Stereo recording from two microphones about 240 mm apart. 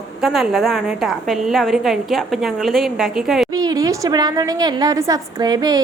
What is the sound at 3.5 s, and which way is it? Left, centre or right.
A woman's voice, centre.